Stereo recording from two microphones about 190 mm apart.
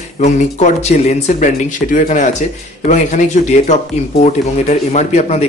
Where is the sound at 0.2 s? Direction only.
40° left (ahead or behind).